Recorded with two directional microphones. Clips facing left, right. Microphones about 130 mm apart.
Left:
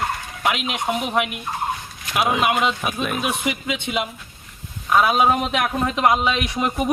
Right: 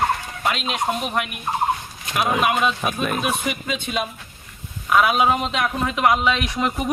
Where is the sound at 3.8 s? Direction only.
15° left (ahead or behind).